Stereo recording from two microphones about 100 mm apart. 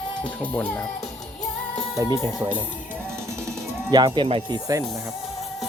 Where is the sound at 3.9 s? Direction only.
50° right (ahead or behind).